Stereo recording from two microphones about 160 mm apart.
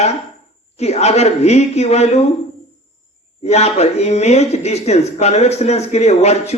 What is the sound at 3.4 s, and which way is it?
Speech, 40° left (ahead or behind).